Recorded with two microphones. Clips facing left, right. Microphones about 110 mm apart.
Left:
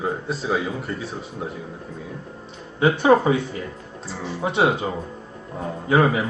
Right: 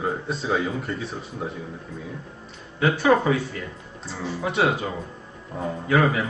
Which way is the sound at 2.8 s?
25° left (ahead or behind).